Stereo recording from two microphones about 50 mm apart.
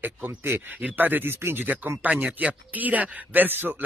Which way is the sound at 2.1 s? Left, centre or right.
Right.